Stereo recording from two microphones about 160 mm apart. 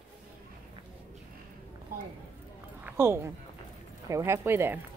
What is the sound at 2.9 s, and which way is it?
Speech, 15° right (ahead or behind).